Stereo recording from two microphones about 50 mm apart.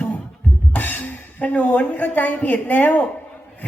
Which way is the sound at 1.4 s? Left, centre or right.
Left.